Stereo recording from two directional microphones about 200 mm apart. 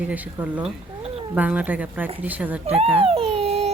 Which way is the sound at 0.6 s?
30° right (ahead or behind).